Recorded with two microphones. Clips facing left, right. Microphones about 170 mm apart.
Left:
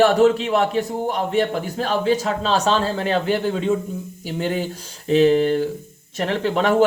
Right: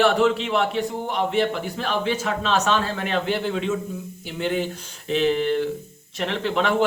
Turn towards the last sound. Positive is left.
turn(degrees=40)  # may be behind; listen again after turning